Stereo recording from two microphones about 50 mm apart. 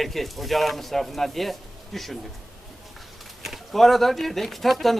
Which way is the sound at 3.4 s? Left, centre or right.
Centre.